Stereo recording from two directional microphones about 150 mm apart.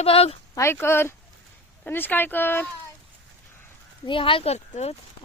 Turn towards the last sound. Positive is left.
turn(degrees=45)  # may be behind; listen again after turning